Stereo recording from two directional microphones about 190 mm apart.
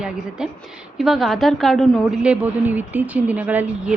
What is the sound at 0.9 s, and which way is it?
A woman's voice, centre (ahead or behind).